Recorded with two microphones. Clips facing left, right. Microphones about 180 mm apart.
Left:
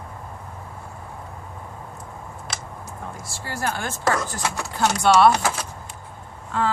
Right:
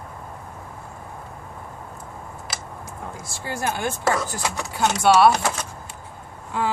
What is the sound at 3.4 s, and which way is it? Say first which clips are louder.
Speech: right 2 dB; 20° right (ahead or behind).